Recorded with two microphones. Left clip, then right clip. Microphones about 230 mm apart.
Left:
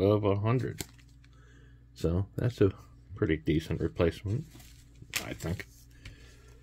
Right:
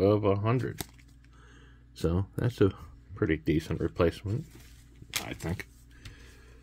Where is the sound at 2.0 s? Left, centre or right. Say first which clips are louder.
Right 1 dB; centre.